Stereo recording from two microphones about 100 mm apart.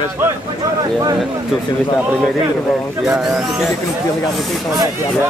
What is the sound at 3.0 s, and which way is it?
Speech, 5° right (ahead or behind).